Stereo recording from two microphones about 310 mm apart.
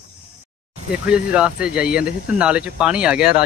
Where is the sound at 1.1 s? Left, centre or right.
Centre.